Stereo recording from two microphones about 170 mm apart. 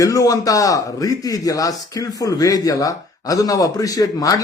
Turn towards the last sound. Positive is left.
turn(degrees=20)  # may be behind; listen again after turning